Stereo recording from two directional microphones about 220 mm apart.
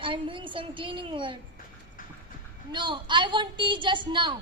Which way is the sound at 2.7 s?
20° right (ahead or behind).